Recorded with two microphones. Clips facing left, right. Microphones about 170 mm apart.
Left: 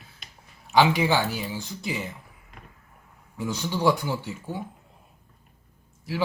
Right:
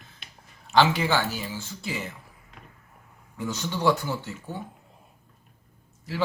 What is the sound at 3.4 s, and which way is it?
Speech, 10° left (ahead or behind).